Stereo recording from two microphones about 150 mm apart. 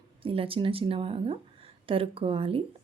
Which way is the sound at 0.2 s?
35° right (ahead or behind).